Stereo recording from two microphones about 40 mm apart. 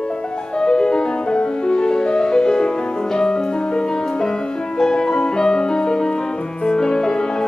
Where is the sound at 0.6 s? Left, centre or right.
Centre.